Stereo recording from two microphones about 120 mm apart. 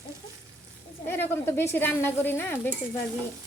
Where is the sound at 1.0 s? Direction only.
20° left (ahead or behind).